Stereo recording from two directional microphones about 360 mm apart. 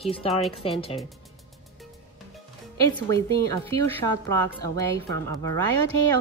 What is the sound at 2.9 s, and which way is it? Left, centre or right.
A woman's voice, centre.